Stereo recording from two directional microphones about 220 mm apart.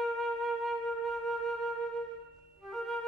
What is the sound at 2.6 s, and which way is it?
Music, centre (ahead or behind).